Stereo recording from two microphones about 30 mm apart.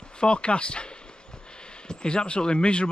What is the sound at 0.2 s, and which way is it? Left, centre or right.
Speech, left.